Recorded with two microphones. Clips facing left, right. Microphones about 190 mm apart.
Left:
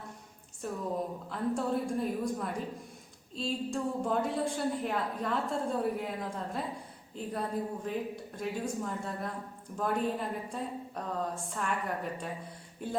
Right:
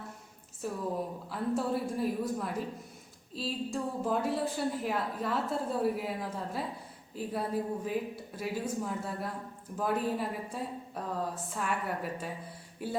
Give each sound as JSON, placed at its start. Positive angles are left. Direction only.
{"t": 0.6, "sound": "a woman's voice", "side_deg": -5}